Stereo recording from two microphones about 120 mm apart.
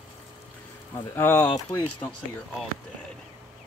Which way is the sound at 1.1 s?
20° left (ahead or behind).